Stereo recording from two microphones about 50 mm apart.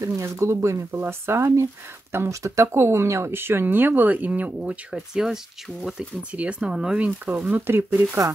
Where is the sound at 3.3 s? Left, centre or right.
Right.